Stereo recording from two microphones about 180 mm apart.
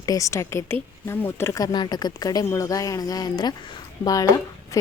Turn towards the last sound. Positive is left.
turn(degrees=15)  # may be behind; listen again after turning